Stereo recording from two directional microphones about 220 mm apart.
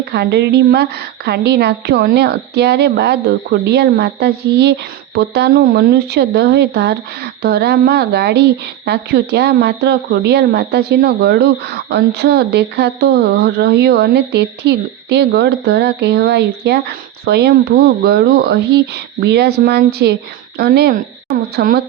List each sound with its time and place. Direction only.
0.0 s speech: 50° right (ahead or behind)